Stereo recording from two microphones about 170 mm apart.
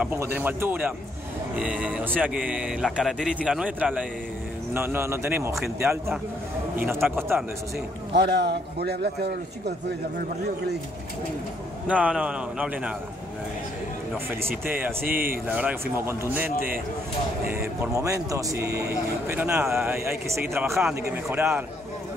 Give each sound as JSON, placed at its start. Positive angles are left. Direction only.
{"t": 0.0, "sound": "speech", "side_deg": -10}
{"t": 6.9, "sound": "speech", "side_deg": -15}
{"t": 8.1, "sound": "a man's voice", "side_deg": -80}
{"t": 11.9, "sound": "speech", "side_deg": -5}
{"t": 14.7, "sound": "speech", "side_deg": -10}
{"t": 15.0, "sound": "speech", "side_deg": -55}
{"t": 15.4, "sound": "speech", "side_deg": -10}
{"t": 17.5, "sound": "speech", "side_deg": -15}